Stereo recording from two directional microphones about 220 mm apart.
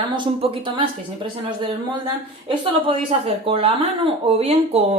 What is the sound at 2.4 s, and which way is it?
Speech, 25° right (ahead or behind).